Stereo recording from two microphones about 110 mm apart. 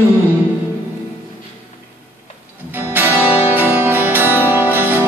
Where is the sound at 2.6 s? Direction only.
15° right (ahead or behind).